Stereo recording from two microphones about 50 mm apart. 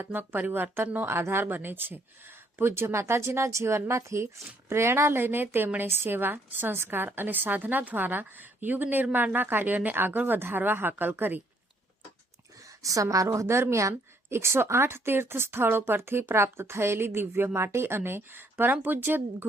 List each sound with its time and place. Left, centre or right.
0.0 s a woman's voice: right
12.8 s a woman's voice: right